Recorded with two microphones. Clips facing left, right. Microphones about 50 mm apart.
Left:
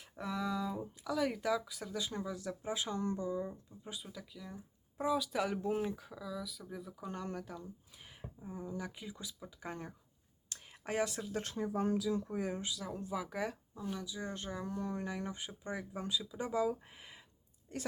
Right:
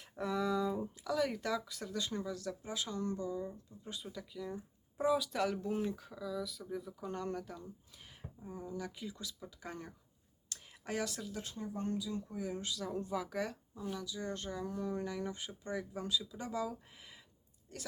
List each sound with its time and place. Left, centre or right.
0.0 s speech: centre
5.5 s speech: left
6.0 s speech: centre
7.9 s a sound: centre
8.8 s speech: centre
11.5 s speech: left
12.5 s speech: centre
14.7 s speech: centre
14.9 s speech: left